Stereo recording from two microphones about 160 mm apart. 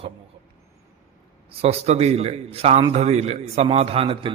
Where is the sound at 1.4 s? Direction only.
40° right (ahead or behind).